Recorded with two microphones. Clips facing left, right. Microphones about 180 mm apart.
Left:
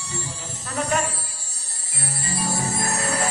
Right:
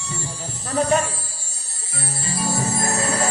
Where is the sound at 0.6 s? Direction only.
30° right (ahead or behind).